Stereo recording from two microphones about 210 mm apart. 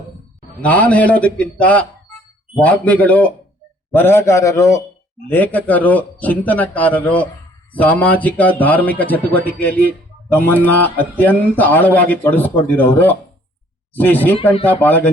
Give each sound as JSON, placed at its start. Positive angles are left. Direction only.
{"t": 0.6, "sound": "a man's voice", "side_deg": 5}